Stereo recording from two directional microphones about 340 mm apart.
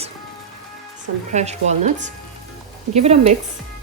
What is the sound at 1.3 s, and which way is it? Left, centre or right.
Speech, centre.